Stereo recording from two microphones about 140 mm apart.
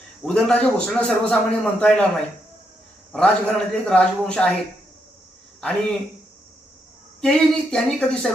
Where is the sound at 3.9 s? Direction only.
5° left (ahead or behind).